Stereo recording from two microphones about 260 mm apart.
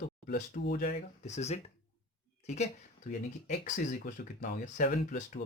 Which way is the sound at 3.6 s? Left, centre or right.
Left.